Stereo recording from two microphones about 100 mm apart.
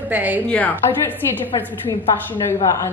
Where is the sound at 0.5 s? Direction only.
15° left (ahead or behind).